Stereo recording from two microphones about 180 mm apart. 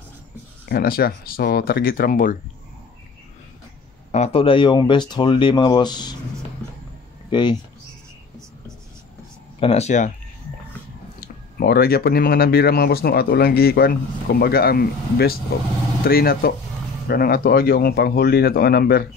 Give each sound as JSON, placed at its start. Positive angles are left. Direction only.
{"t": 0.7, "sound": "speech", "side_deg": 55}
{"t": 4.1, "sound": "speech", "side_deg": 35}
{"t": 7.2, "sound": "speech", "side_deg": 25}
{"t": 9.6, "sound": "speech", "side_deg": 35}
{"t": 11.1, "sound": "speech", "side_deg": 55}